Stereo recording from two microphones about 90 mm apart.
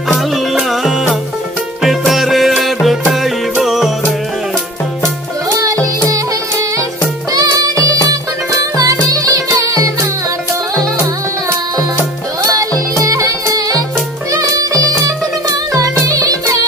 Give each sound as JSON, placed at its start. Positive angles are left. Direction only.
{"t": 0.5, "sound": "music", "side_deg": 0}
{"t": 5.5, "sound": "music", "side_deg": -40}
{"t": 7.3, "sound": "music", "side_deg": -40}
{"t": 12.5, "sound": "music", "side_deg": -40}